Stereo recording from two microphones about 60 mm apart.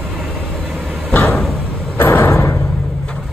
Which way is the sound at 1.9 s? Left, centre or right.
Left.